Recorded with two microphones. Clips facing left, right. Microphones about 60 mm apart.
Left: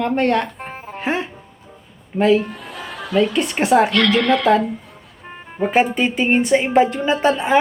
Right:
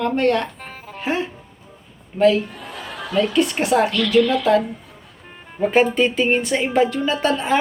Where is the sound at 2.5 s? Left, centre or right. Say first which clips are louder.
Left 2 dB; centre.